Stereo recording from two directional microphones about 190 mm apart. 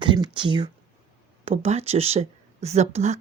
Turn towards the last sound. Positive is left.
turn(degrees=-35)  # may be behind; listen again after turning